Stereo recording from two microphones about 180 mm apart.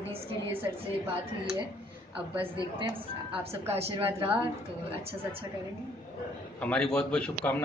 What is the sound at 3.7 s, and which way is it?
Speech, 30° right (ahead or behind).